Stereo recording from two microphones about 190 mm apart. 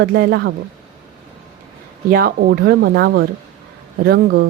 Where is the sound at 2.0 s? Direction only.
50° right (ahead or behind).